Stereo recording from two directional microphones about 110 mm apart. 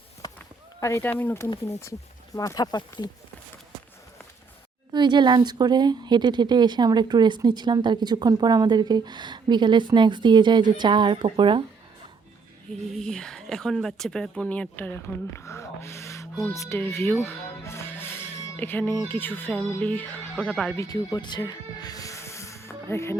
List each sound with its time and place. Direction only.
0.2 s a sound: 35° left (ahead or behind)
0.8 s speech: 25° left (ahead or behind)
4.9 s speech: 40° right (ahead or behind)
12.9 s speech: 5° left (ahead or behind); by 16.3 s 25° left (ahead or behind)
16.5 s music: 25° left (ahead or behind)
19.0 s speech: 20° left (ahead or behind)
20.8 s speech: 35° left (ahead or behind)